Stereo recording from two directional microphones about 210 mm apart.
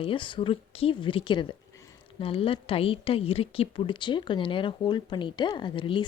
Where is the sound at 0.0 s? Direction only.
25° left (ahead or behind).